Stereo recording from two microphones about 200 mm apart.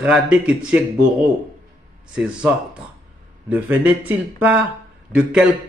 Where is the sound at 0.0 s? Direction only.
5° right (ahead or behind).